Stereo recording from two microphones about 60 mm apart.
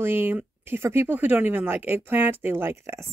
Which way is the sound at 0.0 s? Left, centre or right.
Right.